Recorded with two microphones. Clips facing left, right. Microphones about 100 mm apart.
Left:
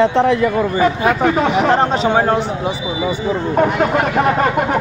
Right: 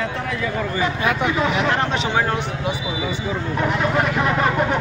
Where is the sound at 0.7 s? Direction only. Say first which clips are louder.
Left 4 dB; 40° left (ahead or behind).